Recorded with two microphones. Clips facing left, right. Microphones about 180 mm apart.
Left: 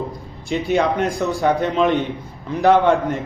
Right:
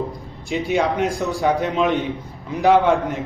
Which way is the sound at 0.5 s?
Centre (ahead or behind).